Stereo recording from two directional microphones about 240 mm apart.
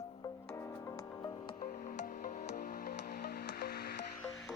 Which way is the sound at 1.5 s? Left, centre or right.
Left.